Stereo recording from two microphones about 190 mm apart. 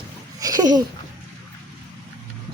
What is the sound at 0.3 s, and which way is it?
Babbling, 20° right (ahead or behind).